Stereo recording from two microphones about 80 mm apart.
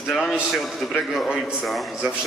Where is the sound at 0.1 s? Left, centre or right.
Centre.